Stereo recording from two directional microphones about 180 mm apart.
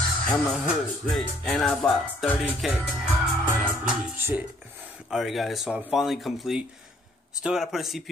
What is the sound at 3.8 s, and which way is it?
A man's voice, 5° right (ahead or behind).